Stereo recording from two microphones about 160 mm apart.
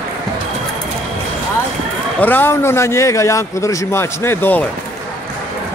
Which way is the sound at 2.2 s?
10° left (ahead or behind).